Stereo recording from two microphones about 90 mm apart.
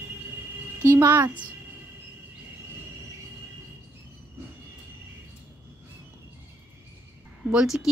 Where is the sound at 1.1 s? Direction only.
15° right (ahead or behind).